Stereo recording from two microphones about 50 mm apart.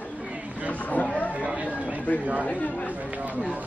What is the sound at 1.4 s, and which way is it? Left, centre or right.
Chatter, centre.